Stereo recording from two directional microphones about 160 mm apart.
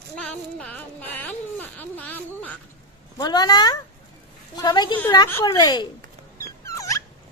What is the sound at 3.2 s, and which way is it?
Speech, 25° left (ahead or behind).